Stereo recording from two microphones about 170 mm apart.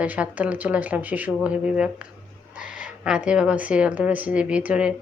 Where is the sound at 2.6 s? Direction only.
50° left (ahead or behind).